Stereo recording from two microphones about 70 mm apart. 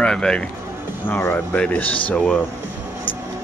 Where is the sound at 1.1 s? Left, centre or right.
Left; by 2.4 s centre.